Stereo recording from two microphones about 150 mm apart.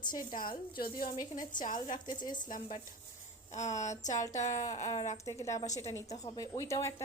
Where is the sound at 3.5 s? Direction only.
50° left (ahead or behind).